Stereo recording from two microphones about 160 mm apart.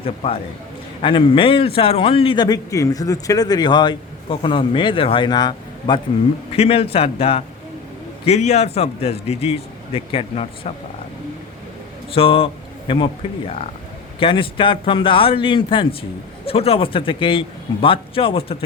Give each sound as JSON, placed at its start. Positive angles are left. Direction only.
{"t": 0.0, "sound": "a man's voice", "side_deg": 35}
{"t": 12.1, "sound": "a man's voice", "side_deg": 35}